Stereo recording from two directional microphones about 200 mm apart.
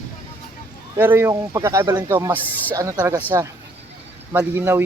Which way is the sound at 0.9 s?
10° right (ahead or behind).